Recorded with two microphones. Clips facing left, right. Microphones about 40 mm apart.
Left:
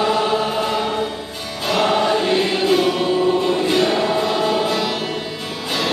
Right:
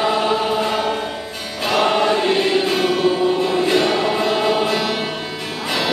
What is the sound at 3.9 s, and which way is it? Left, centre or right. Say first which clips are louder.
Music: even; right.